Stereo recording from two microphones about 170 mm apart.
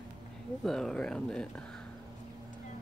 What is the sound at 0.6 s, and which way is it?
Speech, centre (ahead or behind).